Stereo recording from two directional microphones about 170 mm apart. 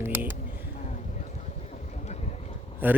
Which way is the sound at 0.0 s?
15° right (ahead or behind).